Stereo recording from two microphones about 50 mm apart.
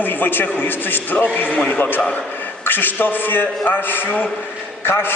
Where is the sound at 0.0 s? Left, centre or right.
Left.